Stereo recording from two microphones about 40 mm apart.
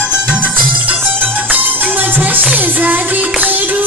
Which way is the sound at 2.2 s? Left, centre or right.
Right.